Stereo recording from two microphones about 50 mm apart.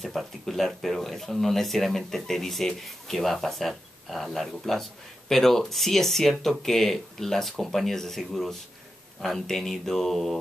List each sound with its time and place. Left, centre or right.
0.0 s speech: centre